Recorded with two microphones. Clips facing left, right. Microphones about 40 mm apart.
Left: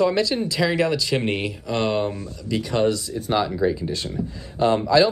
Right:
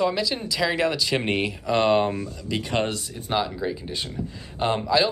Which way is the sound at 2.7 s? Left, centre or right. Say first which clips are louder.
Left 6 dB; right.